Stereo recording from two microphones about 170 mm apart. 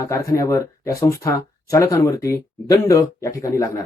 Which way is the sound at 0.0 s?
20° left (ahead or behind).